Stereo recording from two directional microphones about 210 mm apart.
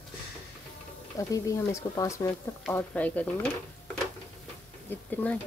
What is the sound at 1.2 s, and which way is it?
Speech, 15° left (ahead or behind).